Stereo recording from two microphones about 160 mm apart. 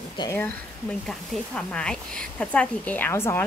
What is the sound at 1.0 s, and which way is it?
Speech, 5° left (ahead or behind).